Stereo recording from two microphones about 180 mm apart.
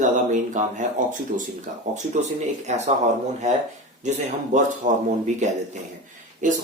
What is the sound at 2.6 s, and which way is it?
Speech, 40° right (ahead or behind).